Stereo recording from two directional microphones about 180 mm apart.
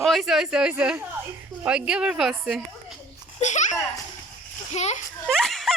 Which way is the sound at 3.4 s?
40° left (ahead or behind).